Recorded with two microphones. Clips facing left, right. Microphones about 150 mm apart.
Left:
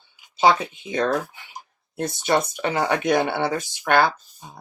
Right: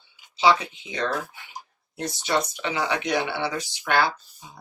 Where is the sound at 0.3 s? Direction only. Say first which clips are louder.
Left 2 dB; 50° left (ahead or behind).